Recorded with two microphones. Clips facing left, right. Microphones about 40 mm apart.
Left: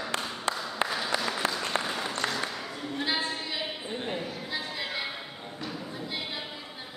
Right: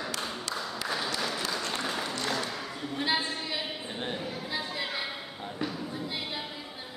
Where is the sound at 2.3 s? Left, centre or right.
Centre.